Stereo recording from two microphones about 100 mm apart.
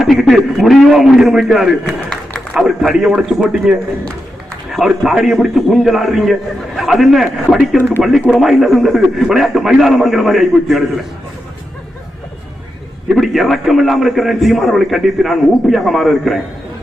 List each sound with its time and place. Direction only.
0.0 s a man's voice: centre (ahead or behind)
13.1 s a man's voice: centre (ahead or behind)